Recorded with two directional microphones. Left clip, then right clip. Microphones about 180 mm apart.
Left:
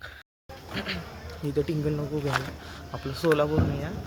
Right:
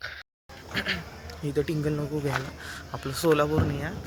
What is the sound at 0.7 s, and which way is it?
Speech, 5° right (ahead or behind).